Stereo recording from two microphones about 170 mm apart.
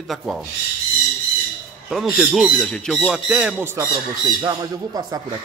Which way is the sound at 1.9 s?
Centre (ahead or behind).